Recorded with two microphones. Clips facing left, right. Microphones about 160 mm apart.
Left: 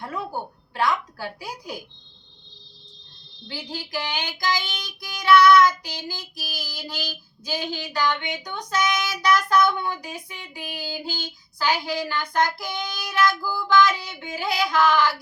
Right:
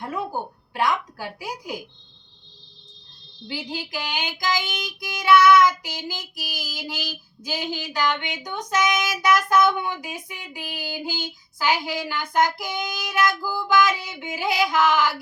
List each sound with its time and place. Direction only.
0.0 s a sound: 15° right (ahead or behind)
0.7 s a woman's voice: 15° right (ahead or behind)
3.4 s child singing: 15° right (ahead or behind)